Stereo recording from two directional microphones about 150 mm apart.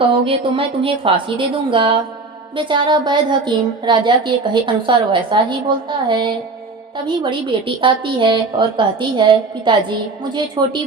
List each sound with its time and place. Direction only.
0.1 s a woman's voice: 35° right (ahead or behind)